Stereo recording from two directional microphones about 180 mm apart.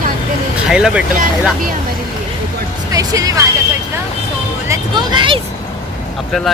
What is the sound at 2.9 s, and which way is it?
Speech, 20° right (ahead or behind).